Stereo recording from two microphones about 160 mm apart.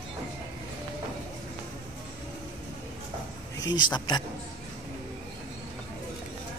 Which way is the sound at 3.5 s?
25° left (ahead or behind).